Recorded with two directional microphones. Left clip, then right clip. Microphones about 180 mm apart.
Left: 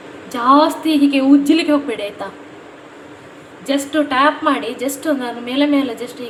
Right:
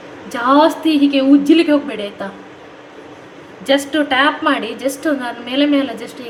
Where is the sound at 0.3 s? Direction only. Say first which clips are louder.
Even; 5° right (ahead or behind).